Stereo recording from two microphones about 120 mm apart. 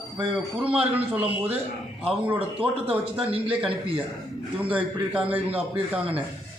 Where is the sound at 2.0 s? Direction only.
50° right (ahead or behind).